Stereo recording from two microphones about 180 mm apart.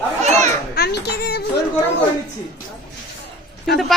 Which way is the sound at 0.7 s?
65° left (ahead or behind).